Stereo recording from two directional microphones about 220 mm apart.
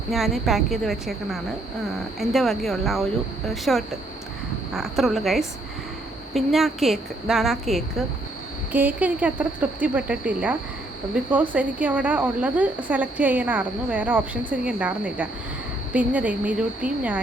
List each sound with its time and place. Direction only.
0.1 s a woman's voice: centre (ahead or behind)